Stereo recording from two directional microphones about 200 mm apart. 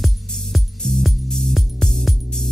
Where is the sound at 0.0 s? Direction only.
Centre (ahead or behind).